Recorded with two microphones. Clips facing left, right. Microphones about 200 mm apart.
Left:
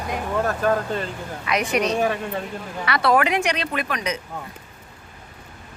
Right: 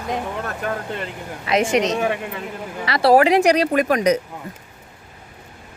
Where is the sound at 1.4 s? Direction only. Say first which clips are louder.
Right 5 dB; 25° right (ahead or behind).